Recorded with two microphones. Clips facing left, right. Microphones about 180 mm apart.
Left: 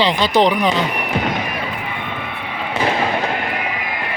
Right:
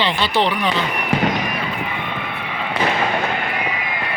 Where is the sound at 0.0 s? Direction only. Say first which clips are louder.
Left 4 dB; 40° left (ahead or behind).